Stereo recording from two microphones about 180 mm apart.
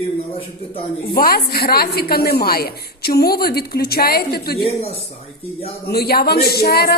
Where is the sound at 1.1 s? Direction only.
55° left (ahead or behind).